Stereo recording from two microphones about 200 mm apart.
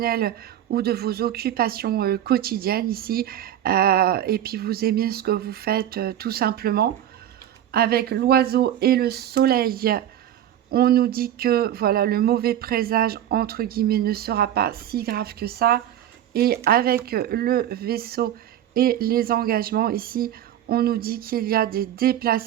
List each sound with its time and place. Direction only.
0.0 s a woman's voice: 50° right (ahead or behind)